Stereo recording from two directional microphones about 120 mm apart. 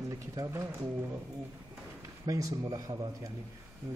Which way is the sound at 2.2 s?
25° right (ahead or behind).